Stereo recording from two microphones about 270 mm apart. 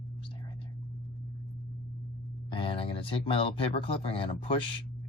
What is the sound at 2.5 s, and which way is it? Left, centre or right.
Speech, centre.